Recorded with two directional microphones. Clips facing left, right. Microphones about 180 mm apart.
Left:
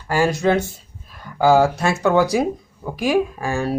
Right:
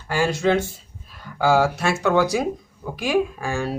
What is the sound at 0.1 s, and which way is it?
Speech, 40° left (ahead or behind).